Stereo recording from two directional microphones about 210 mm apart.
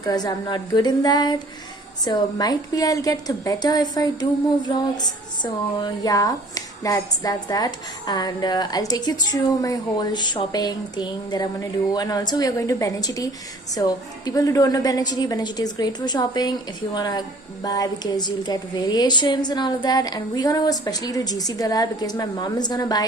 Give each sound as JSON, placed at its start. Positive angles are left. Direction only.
{"t": 0.0, "sound": "a woman's voice", "side_deg": 20}